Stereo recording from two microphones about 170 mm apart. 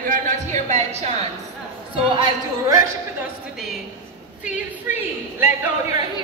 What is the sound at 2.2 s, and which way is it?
Speech, 20° right (ahead or behind).